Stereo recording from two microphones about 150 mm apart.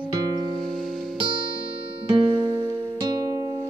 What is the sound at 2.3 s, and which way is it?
Music, 30° right (ahead or behind).